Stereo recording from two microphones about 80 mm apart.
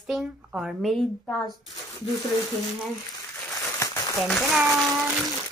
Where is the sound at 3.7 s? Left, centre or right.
Left.